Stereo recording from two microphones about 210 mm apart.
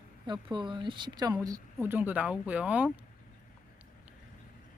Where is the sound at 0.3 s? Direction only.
20° right (ahead or behind); by 3.0 s 5° right (ahead or behind).